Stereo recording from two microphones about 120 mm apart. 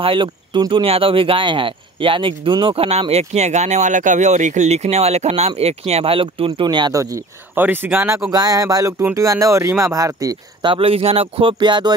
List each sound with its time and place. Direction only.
0.0 s speech: 45° right (ahead or behind)
6.9 s speech: 25° right (ahead or behind)
7.5 s speech: 15° right (ahead or behind)
8.3 s speech: 30° right (ahead or behind)
10.7 s speech: 55° right (ahead or behind)